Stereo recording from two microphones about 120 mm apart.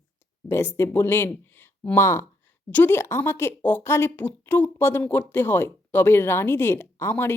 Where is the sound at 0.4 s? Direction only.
20° left (ahead or behind).